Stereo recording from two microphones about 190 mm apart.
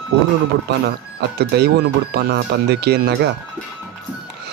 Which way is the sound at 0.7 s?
65° right (ahead or behind).